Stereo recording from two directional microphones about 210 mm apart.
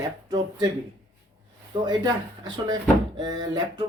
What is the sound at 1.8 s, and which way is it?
Speech, 20° right (ahead or behind).